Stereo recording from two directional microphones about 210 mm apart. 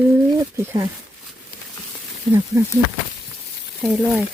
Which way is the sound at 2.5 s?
15° right (ahead or behind).